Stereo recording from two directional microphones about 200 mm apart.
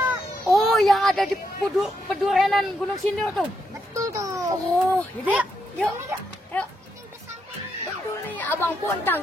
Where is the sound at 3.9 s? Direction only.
15° right (ahead or behind).